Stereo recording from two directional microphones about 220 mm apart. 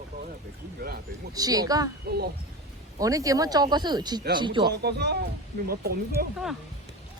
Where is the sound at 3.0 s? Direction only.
15° right (ahead or behind).